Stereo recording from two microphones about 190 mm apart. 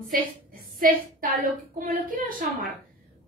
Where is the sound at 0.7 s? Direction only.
50° right (ahead or behind).